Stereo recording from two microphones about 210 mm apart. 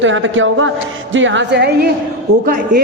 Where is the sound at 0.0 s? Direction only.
65° right (ahead or behind).